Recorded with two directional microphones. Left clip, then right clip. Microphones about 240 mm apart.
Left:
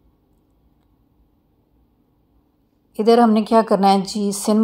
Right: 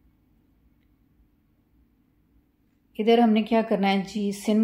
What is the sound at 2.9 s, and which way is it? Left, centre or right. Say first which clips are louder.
Speech: left 6 dB; centre.